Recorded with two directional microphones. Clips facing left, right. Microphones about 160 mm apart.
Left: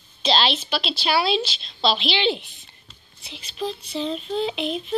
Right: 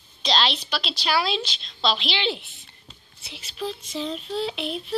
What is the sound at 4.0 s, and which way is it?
Child singing, 5° right (ahead or behind).